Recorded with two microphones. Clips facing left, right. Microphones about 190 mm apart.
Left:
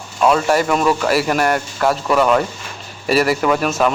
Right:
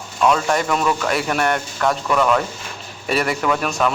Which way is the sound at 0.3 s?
5° left (ahead or behind).